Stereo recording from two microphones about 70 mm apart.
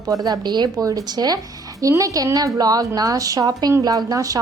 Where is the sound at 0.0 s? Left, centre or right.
Right.